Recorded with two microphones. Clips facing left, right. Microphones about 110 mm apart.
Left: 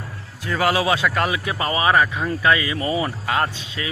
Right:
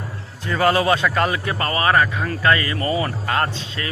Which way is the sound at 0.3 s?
5° left (ahead or behind).